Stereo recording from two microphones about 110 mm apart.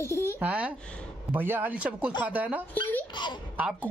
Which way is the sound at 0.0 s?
25° left (ahead or behind).